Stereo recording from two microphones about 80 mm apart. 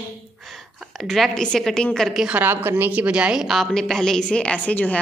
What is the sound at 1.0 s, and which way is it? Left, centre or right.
A woman's voice, centre.